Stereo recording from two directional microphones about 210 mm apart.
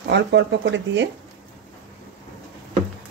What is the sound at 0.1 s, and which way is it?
Speech, 55° right (ahead or behind).